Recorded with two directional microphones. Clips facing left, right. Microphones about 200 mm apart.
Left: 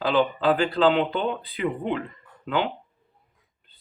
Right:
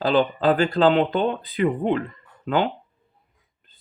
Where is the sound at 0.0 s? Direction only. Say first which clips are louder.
Right 2 dB; 45° right (ahead or behind).